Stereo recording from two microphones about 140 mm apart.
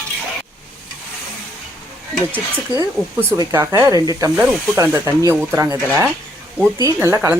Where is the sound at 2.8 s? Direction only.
20° right (ahead or behind).